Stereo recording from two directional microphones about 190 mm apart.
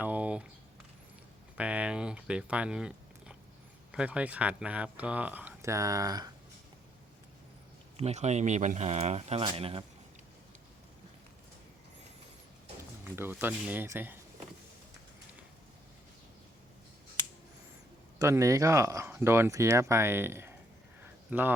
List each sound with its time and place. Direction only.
0.0 s typing: 10° right (ahead or behind)
1.5 s speech: 5° right (ahead or behind)
7.9 s a man's voice: 35° right (ahead or behind)
13.1 s speech: 10° right (ahead or behind)
18.2 s speech: 15° right (ahead or behind)